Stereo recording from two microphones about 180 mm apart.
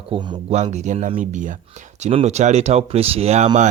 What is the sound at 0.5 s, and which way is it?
Speech, 40° right (ahead or behind).